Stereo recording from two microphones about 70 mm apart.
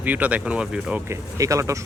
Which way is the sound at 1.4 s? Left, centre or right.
Right.